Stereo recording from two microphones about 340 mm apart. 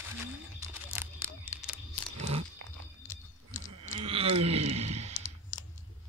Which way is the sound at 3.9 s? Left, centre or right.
Centre.